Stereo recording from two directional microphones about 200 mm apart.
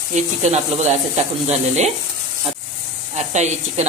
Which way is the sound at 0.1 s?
35° right (ahead or behind).